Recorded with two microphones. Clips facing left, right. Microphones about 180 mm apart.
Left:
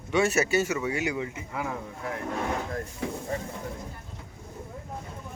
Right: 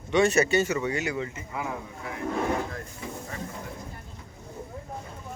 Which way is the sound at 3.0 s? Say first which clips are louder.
Left 6 dB; 70° left (ahead or behind).